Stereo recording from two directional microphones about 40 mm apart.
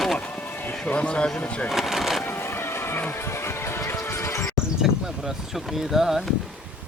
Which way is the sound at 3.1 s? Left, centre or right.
Left.